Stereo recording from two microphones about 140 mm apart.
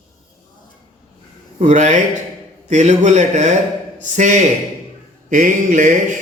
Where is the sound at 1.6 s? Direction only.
60° right (ahead or behind).